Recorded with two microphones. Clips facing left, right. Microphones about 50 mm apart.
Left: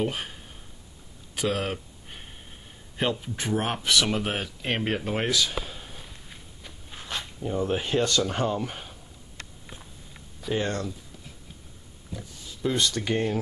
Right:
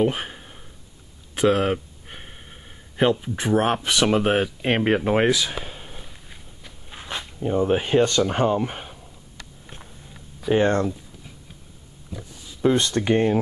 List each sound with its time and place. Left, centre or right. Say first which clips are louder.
0.0 s speech: right 7 dB; right
1.3 s a sound: right 8 dB; right
3.0 s speech: right 7 dB; centre
10.5 s speech: right 9 dB; right
12.1 s a sound: right 2 dB; centre
12.6 s speech: right 7 dB; right